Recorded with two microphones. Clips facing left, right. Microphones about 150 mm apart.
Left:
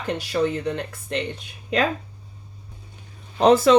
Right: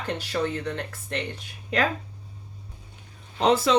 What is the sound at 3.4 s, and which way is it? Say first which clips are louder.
Speech: left 6 dB; 45° left (ahead or behind).